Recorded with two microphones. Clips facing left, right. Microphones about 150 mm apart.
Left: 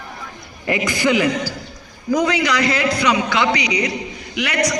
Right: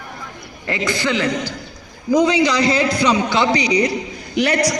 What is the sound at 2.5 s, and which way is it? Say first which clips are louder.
A man's voice: right 2 dB; 30° right (ahead or behind).